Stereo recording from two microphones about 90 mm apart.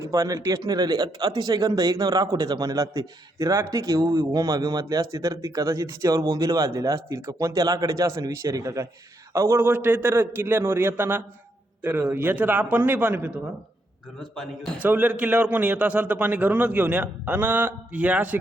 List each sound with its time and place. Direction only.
0.0 s a man's voice: 40° right (ahead or behind)
9.6 s a man's voice: 25° right (ahead or behind)
14.2 s a man's voice: 5° left (ahead or behind)
14.8 s a man's voice: 20° right (ahead or behind)